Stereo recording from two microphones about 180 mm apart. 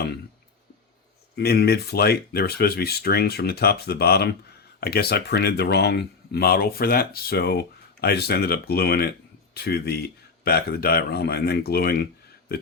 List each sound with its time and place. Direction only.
1.4 s speech: 65° left (ahead or behind)